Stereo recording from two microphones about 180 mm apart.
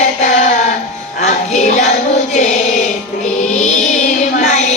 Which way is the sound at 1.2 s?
40° left (ahead or behind).